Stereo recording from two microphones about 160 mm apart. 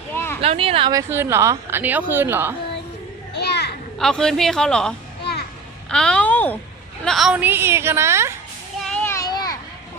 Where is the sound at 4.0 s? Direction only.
5° left (ahead or behind).